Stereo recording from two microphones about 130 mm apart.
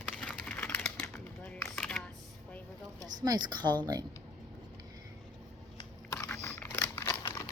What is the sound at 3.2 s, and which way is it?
Speech, 35° right (ahead or behind).